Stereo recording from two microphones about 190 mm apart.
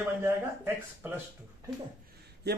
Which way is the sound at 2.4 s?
60° right (ahead or behind).